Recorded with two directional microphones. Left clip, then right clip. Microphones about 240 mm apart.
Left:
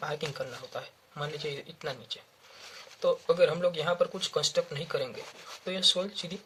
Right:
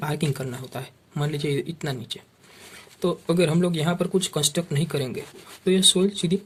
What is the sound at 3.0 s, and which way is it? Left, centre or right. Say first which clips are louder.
Speech: right 1 dB; right.